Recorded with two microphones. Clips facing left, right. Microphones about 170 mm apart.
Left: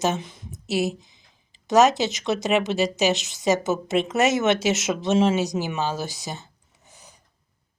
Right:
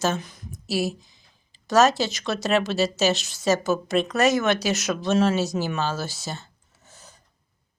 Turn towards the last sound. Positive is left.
turn(degrees=15)  # may be behind; listen again after turning